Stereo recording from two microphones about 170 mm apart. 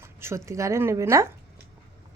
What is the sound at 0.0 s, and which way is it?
Speech, 15° right (ahead or behind).